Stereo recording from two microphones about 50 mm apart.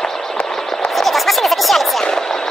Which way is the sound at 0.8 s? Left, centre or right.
Centre.